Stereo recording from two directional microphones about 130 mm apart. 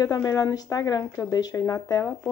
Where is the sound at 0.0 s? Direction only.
25° left (ahead or behind).